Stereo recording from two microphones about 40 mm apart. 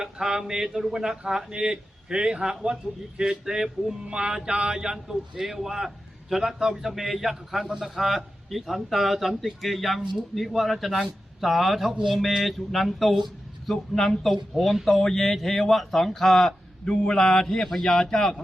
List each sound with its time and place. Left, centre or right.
0.0 s a man's voice: centre
16.8 s speech: left
17.2 s speech: centre